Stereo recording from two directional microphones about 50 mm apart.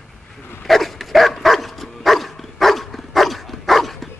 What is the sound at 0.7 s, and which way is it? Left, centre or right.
Dog, centre.